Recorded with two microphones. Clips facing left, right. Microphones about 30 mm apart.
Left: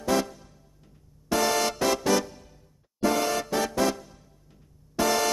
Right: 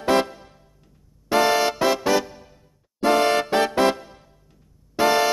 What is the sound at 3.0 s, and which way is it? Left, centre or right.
Music, right.